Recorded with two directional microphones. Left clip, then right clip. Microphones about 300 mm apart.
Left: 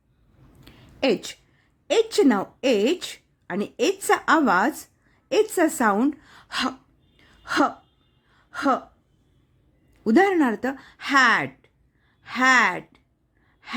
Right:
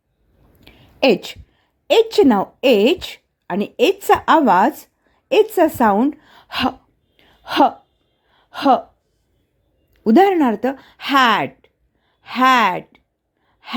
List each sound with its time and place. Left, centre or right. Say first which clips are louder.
0.6 s a woman's voice: right 8 dB; centre
7.2 s a sound: right 7 dB; centre
8.3 s gasp: right 8 dB; centre
10.0 s speech: right 6 dB; centre
13.6 s gasp: right 6 dB; centre